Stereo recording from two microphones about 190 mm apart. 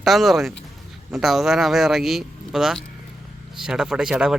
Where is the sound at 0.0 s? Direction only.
Centre (ahead or behind).